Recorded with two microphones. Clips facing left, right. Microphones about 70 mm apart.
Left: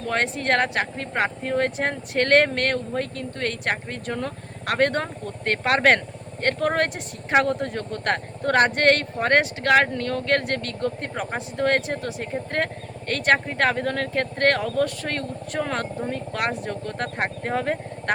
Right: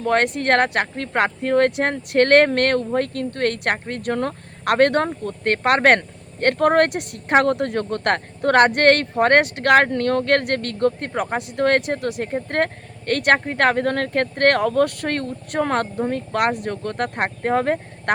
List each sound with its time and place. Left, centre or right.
0.0 s speech: right